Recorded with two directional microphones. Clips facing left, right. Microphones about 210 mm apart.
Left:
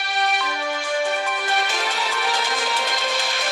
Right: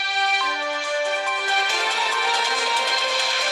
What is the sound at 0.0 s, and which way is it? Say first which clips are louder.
Music: left 3 dB; 50° left (ahead or behind).